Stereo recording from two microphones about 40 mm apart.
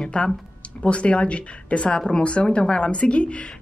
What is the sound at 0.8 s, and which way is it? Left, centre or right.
Speech, left.